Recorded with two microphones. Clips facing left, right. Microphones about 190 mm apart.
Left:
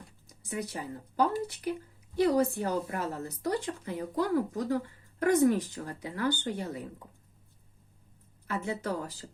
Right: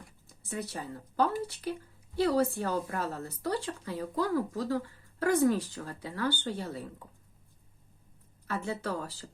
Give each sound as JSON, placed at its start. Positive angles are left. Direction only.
{"t": 0.3, "sound": "speech", "side_deg": 15}
{"t": 8.4, "sound": "speech", "side_deg": 15}